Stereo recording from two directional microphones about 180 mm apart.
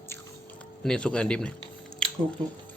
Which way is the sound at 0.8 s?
5° left (ahead or behind).